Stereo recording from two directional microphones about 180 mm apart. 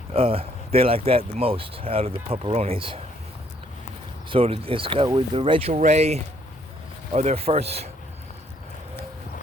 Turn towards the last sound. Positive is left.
turn(degrees=-35)  # may be behind; listen again after turning